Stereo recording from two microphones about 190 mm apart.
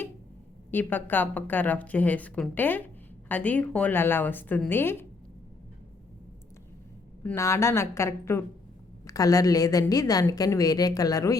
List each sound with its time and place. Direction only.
0.7 s a woman's voice: 10° left (ahead or behind)
7.2 s a woman's voice: 15° left (ahead or behind)